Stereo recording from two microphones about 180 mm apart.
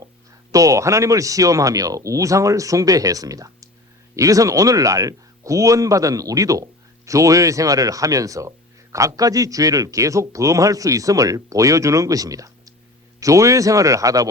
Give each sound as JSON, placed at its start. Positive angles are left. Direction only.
{"t": 0.5, "sound": "speech", "side_deg": -20}